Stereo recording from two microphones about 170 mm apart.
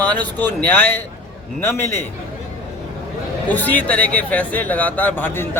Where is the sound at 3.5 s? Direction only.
10° left (ahead or behind).